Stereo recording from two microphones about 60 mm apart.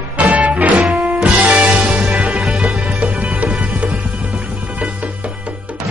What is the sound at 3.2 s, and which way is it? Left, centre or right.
Music, centre.